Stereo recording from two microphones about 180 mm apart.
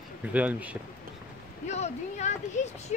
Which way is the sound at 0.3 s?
10° right (ahead or behind).